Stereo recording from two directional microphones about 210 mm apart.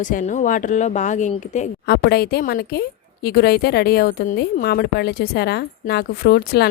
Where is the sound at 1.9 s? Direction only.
50° left (ahead or behind).